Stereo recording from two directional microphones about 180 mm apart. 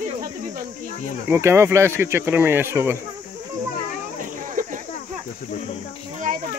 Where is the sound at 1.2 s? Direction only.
15° right (ahead or behind).